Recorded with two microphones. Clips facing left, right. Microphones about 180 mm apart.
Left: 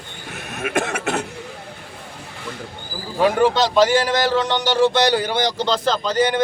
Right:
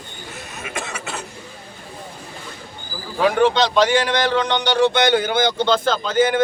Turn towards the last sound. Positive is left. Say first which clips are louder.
# right 1 dB
turn(degrees=0)  # may be behind; listen again after turning